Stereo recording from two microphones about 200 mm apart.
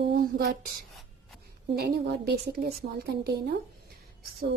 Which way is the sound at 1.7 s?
50° right (ahead or behind).